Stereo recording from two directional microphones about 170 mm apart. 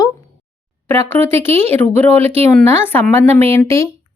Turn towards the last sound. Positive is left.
turn(degrees=15)  # may be behind; listen again after turning